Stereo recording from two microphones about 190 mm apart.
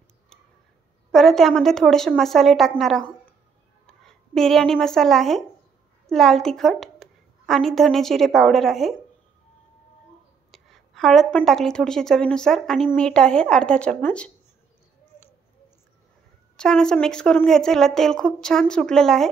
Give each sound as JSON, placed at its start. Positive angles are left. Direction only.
{"t": 1.1, "sound": "a woman's voice", "side_deg": 0}
{"t": 10.5, "sound": "a sound", "side_deg": 0}
{"t": 11.3, "sound": "speech", "side_deg": 0}
{"t": 16.5, "sound": "speech", "side_deg": 5}